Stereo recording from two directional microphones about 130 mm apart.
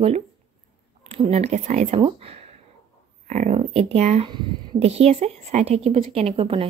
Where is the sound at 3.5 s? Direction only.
50° right (ahead or behind).